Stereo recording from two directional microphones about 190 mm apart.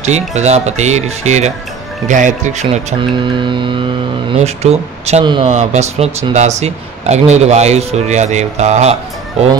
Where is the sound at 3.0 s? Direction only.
25° right (ahead or behind).